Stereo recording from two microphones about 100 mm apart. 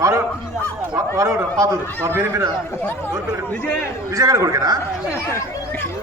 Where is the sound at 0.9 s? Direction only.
30° right (ahead or behind).